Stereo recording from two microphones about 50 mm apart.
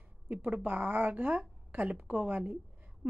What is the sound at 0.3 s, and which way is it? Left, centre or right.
A woman's voice, right.